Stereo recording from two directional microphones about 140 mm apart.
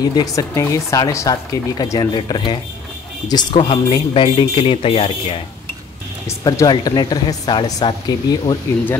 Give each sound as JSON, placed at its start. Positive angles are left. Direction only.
{"t": 0.0, "sound": "speech", "side_deg": 25}
{"t": 6.2, "sound": "speech", "side_deg": 25}